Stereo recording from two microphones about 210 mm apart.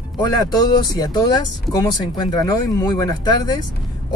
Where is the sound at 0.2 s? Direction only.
20° left (ahead or behind).